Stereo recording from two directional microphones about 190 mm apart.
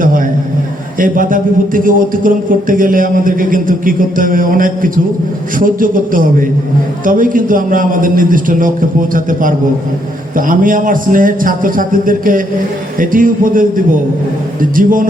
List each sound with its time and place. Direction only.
0.9 s a man's voice: 45° right (ahead or behind)